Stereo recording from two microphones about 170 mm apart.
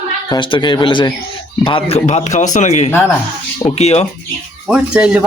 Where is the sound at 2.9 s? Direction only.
15° left (ahead or behind).